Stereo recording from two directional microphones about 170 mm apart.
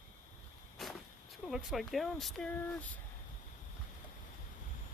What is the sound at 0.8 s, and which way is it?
Vehicle, centre (ahead or behind).